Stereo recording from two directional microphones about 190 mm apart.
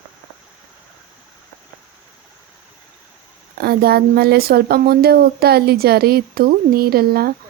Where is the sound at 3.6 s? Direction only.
55° right (ahead or behind).